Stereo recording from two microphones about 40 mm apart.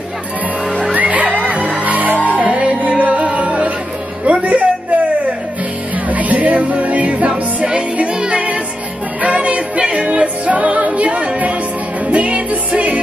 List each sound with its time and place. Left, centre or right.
0.9 s music: right
2.4 s music: right
4.3 s a sound: right
6.0 s music: right
7.6 s music: right